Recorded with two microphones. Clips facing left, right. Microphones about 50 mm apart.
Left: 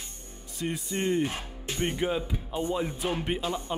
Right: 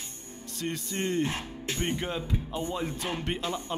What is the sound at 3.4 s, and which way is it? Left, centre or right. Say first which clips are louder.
Speech: left 1 dB; centre.